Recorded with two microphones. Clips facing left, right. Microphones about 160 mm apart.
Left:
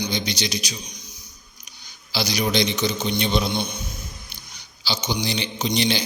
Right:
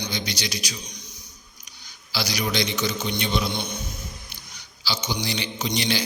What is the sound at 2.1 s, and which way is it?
Mantra, 20° left (ahead or behind).